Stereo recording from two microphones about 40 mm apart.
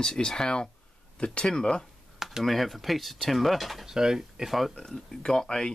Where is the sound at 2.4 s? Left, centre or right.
Centre.